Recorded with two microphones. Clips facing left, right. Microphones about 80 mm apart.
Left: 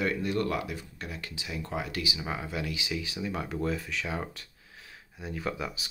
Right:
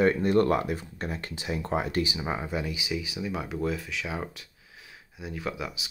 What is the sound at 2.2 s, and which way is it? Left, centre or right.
Speech, right.